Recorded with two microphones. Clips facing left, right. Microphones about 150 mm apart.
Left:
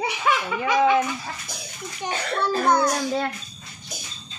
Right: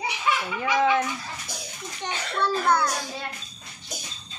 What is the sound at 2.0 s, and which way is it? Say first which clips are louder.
Speech: left 2 dB; 15° left (ahead or behind).